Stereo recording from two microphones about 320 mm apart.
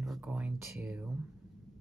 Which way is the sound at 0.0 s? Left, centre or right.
Centre.